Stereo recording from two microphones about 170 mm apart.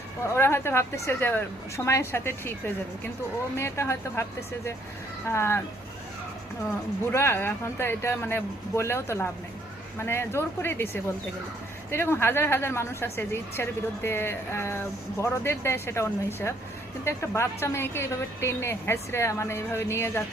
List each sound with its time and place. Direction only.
0.3 s a woman's voice: 15° left (ahead or behind)
7.1 s a woman's voice: 15° left (ahead or behind)